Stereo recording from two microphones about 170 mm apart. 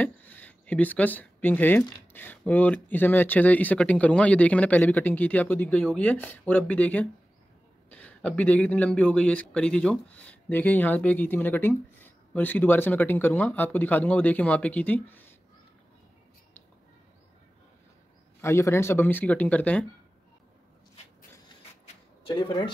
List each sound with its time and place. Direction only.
0.0 s speech: 10° left (ahead or behind)
18.4 s speech: 15° left (ahead or behind)
22.2 s speech: 25° left (ahead or behind)